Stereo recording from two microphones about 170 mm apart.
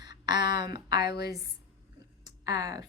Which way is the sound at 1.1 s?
80° left.